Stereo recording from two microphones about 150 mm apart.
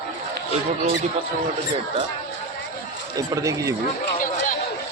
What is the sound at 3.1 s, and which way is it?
Speech, 20° right (ahead or behind).